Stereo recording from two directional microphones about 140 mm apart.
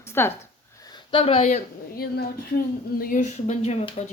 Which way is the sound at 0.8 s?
35° left (ahead or behind).